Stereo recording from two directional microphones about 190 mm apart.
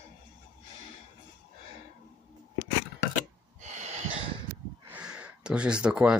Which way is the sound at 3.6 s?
40° right (ahead or behind).